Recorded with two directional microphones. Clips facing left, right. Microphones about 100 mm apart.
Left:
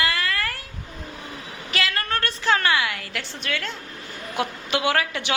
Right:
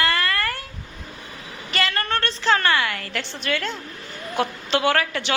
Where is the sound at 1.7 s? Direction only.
Centre (ahead or behind).